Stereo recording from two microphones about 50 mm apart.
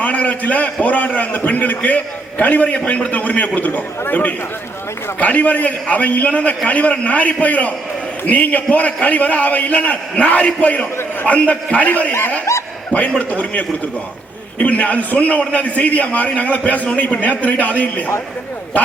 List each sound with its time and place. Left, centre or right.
0.0 s a man's voice: left
12.5 s speech: left
12.9 s a man's voice: left